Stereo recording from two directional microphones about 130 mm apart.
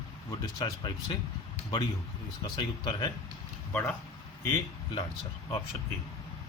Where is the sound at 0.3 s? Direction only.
40° left (ahead or behind).